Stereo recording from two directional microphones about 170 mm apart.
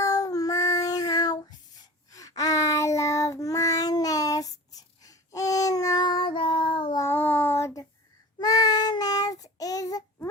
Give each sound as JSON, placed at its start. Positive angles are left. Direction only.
{"t": 0.0, "sound": "child singing", "side_deg": 20}
{"t": 7.0, "sound": "child singing", "side_deg": 10}